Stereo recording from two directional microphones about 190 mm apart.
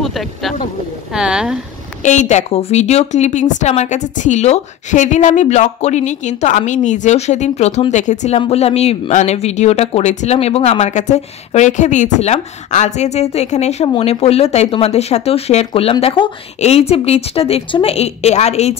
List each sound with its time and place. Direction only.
0.0 s speech: centre (ahead or behind)
2.0 s a woman's voice: 40° left (ahead or behind)